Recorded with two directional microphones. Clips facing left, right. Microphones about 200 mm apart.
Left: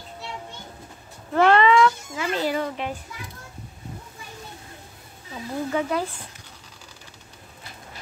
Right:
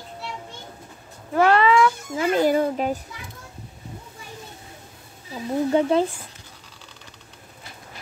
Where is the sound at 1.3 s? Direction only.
5° right (ahead or behind).